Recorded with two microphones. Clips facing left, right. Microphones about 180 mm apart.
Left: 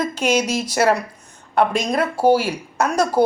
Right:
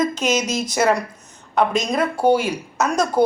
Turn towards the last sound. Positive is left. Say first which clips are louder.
# left 1 dB
turn(degrees=10)  # may be behind; listen again after turning